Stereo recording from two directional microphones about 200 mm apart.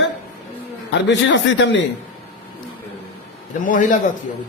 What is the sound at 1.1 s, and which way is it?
Speech, 65° left (ahead or behind).